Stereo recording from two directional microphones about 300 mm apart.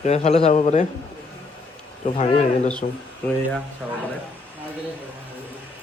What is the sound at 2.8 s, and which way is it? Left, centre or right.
Speech, left.